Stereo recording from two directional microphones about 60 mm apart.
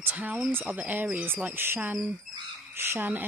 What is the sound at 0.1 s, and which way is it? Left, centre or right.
Speech, right.